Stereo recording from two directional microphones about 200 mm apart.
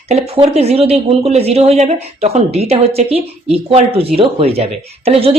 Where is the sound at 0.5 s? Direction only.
30° right (ahead or behind).